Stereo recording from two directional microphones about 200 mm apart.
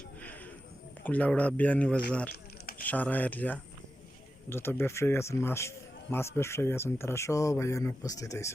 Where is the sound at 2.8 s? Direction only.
10° left (ahead or behind).